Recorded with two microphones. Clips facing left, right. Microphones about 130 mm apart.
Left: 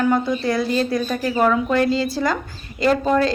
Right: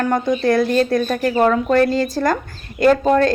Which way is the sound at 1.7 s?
50° right (ahead or behind).